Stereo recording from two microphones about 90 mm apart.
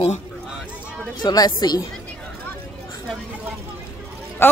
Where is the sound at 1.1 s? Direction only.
50° left (ahead or behind).